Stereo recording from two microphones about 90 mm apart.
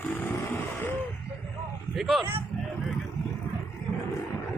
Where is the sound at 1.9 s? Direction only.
Centre (ahead or behind).